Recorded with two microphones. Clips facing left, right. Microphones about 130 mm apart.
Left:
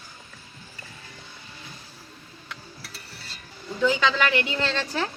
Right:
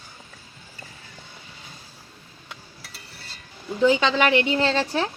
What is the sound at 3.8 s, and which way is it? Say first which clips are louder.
Speech: right 4 dB; 25° right (ahead or behind).